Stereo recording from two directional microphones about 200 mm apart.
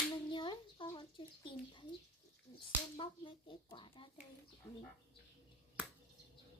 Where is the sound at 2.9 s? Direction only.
25° left (ahead or behind).